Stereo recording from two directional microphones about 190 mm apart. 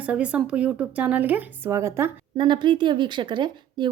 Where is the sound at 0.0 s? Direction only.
5° right (ahead or behind).